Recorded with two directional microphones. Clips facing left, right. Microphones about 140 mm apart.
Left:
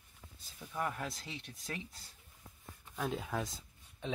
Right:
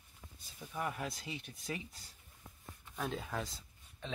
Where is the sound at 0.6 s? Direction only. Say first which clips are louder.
Left 1 dB; 5° right (ahead or behind).